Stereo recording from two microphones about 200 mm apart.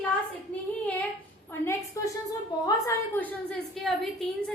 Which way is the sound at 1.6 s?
15° left (ahead or behind).